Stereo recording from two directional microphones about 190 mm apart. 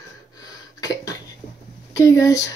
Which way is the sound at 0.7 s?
20° left (ahead or behind).